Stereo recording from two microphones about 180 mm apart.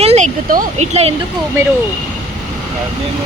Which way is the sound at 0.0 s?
35° right (ahead or behind).